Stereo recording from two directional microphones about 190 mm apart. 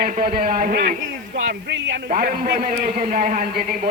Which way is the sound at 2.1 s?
50° right (ahead or behind).